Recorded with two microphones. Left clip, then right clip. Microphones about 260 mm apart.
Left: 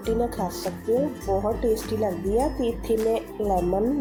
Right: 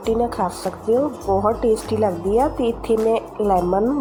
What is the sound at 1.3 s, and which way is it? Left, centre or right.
Speech, centre.